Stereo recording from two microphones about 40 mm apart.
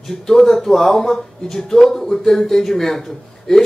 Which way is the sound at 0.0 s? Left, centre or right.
Centre.